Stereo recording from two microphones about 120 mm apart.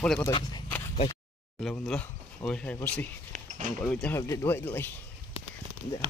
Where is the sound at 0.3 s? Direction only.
40° left (ahead or behind).